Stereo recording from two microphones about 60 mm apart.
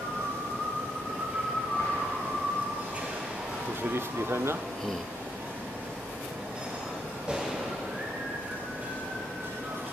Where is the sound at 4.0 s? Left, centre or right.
Right.